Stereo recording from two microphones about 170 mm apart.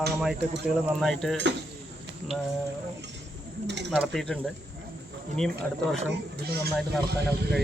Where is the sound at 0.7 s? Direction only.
Centre (ahead or behind).